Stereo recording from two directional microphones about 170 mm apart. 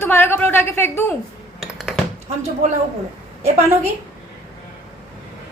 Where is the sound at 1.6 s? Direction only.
Centre (ahead or behind).